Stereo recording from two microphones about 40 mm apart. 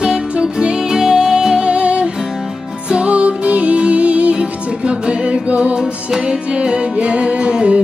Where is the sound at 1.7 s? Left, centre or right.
Right.